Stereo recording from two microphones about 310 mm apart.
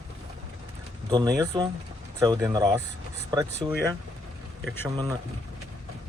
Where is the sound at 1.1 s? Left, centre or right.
Centre.